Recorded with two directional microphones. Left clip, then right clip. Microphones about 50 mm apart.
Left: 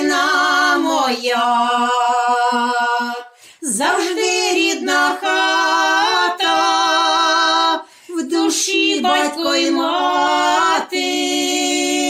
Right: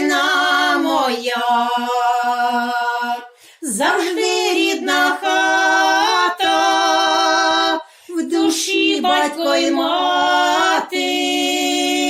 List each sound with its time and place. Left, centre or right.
3.8 s a woman's voice: centre
4.4 s music: right
8.3 s female singing: centre
9.0 s a sound: centre